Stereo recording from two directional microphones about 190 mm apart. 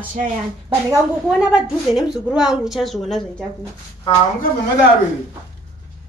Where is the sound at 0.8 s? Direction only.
Centre (ahead or behind).